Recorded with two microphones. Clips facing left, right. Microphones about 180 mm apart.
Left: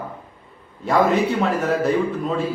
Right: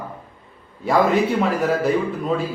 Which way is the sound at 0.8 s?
Centre (ahead or behind).